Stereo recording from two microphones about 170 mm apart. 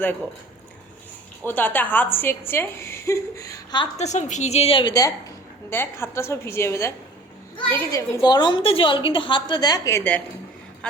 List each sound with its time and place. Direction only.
1.5 s a woman's voice: 10° left (ahead or behind)
3.9 s a woman's voice: 40° left (ahead or behind); by 10.2 s 10° left (ahead or behind)